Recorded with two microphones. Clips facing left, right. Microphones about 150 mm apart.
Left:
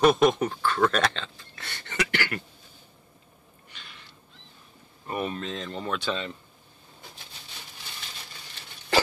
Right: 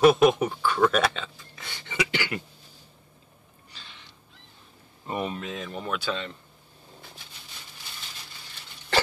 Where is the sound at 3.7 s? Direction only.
25° right (ahead or behind).